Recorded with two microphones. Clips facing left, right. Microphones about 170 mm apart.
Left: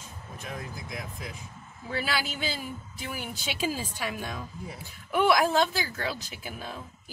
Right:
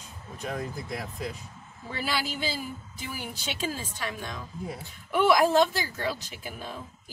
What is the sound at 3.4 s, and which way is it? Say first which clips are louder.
A woman's voice: left 2 dB; 10° left (ahead or behind).